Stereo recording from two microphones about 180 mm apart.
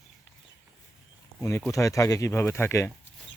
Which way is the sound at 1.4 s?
10° left (ahead or behind).